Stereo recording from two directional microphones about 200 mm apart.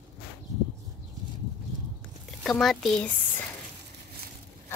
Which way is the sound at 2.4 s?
Centre (ahead or behind).